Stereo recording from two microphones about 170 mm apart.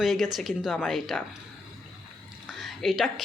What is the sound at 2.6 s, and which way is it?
Speech, centre (ahead or behind).